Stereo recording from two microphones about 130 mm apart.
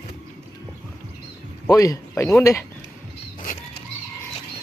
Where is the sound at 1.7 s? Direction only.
25° left (ahead or behind).